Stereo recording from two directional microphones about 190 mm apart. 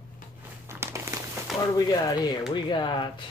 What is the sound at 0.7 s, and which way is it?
Crumpling, 15° right (ahead or behind).